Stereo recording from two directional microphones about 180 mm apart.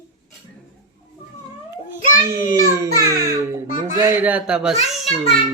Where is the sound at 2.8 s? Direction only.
15° right (ahead or behind).